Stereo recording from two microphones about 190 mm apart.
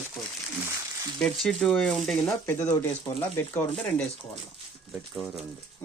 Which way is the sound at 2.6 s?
20° left (ahead or behind).